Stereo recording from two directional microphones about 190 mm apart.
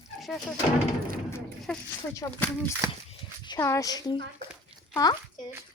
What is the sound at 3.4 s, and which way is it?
A woman's voice, 20° left (ahead or behind).